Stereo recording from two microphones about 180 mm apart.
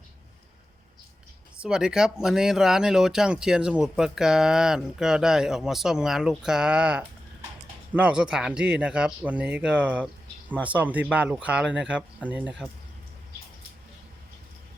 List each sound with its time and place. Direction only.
1.5 s speech: 5° right (ahead or behind)